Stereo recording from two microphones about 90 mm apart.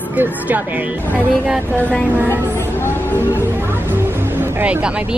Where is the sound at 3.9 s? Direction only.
20° right (ahead or behind).